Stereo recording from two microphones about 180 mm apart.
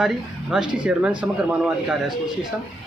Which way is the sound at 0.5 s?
5° right (ahead or behind).